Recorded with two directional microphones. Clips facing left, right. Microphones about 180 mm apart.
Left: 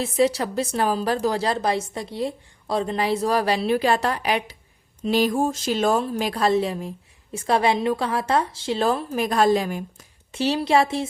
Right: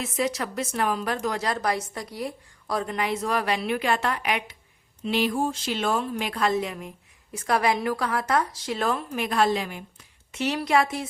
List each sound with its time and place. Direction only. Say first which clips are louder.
0.0 s a woman's voice: left 6 dB; 30° left (ahead or behind)